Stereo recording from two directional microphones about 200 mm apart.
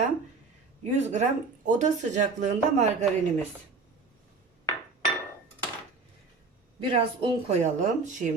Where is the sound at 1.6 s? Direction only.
40° right (ahead or behind).